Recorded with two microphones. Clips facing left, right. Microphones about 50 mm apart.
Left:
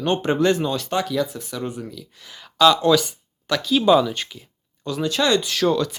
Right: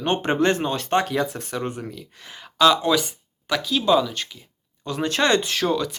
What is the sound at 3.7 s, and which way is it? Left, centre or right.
Speech, centre.